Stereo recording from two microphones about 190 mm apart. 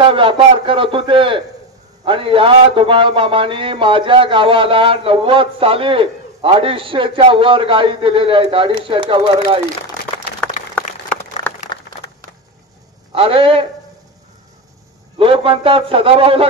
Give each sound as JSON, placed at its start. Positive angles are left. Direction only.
{"t": 0.0, "sound": "a man's voice", "side_deg": -25}
{"t": 13.1, "sound": "a man's voice", "side_deg": -30}
{"t": 15.1, "sound": "a man's voice", "side_deg": -30}